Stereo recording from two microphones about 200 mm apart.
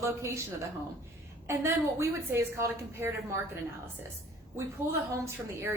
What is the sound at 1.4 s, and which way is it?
A woman's voice, 15° right (ahead or behind).